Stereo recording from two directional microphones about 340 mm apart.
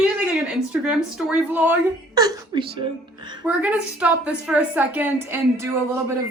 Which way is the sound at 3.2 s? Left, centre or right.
Centre.